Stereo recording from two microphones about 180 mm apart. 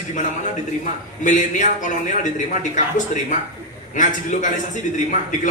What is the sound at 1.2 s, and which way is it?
Speech, 45° left (ahead or behind).